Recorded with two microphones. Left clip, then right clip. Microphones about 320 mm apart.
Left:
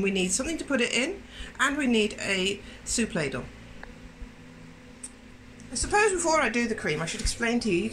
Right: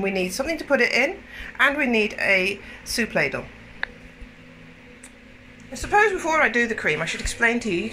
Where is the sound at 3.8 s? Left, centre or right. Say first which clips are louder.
Right 17 dB; right.